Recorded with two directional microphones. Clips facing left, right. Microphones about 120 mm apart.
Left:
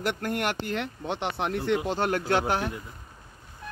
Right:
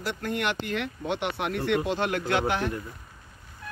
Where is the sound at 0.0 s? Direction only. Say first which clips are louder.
Left 1 dB; 50° left (ahead or behind); by 2.6 s 35° left (ahead or behind).